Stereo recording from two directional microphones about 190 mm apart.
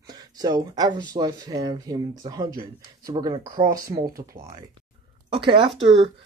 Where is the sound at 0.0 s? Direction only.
20° right (ahead or behind).